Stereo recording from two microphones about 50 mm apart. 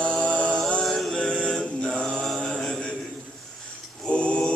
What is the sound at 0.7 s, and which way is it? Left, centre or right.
Speech, centre.